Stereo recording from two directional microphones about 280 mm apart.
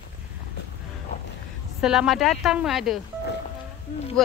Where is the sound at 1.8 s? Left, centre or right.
Centre.